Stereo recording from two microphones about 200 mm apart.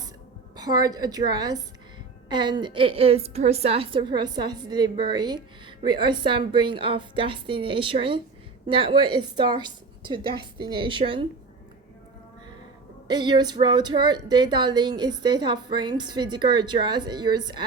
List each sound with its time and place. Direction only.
0.5 s a woman's voice: 20° right (ahead or behind)
13.1 s a woman's voice: 20° right (ahead or behind)